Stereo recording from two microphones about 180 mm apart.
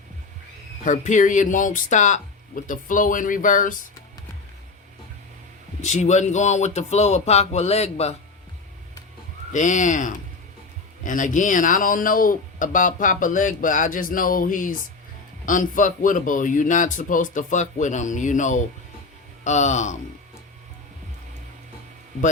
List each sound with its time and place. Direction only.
0.9 s speech: 45° left (ahead or behind)
5.8 s speech: 40° left (ahead or behind)
9.5 s speech: 45° left (ahead or behind)